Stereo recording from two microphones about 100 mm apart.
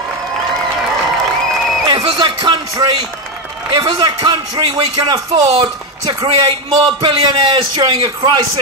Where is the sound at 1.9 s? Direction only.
45° right (ahead or behind).